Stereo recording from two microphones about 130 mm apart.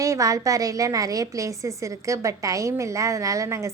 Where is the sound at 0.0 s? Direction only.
25° right (ahead or behind).